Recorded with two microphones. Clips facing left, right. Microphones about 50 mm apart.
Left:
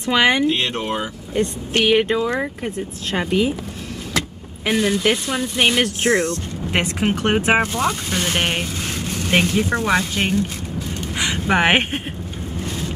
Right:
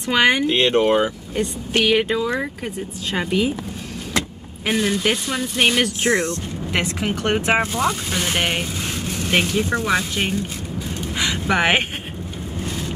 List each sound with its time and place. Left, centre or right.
0.5 s speech: right
1.4 s speech: centre
1.9 s speech: centre
4.6 s speech: centre
6.0 s speech: right
6.7 s speech: centre
7.6 s speech: centre
11.1 s a sound: centre
12.5 s boat: centre